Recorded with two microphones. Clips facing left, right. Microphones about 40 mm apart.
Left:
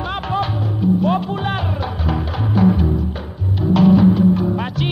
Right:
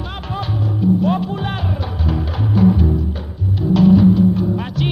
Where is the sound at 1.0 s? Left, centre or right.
Centre.